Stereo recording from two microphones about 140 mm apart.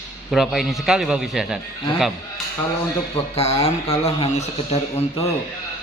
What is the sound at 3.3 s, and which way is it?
Speech, 50° left (ahead or behind).